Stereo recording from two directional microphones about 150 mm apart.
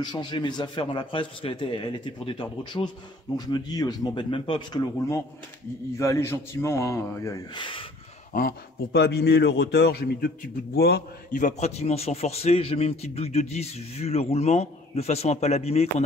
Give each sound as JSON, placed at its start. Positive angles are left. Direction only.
{"t": 0.0, "sound": "a man's voice", "side_deg": 30}
{"t": 7.5, "sound": "a man's voice", "side_deg": 35}
{"t": 8.3, "sound": "a man's voice", "side_deg": 75}
{"t": 11.4, "sound": "a man's voice", "side_deg": 50}